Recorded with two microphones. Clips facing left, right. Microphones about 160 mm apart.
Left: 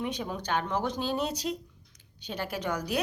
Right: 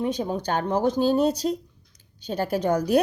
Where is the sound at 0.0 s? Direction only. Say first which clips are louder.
Right 8 dB; 35° right (ahead or behind).